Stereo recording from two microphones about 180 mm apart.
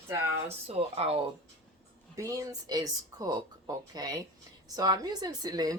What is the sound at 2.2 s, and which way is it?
Speech, 20° right (ahead or behind).